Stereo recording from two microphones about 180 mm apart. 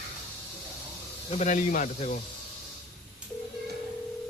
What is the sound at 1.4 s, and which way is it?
Speech, 45° left (ahead or behind).